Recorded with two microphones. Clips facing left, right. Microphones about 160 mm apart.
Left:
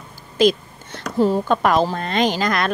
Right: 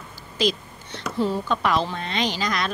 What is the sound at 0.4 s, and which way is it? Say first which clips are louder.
A woman's voice: left 8 dB; 50° left (ahead or behind).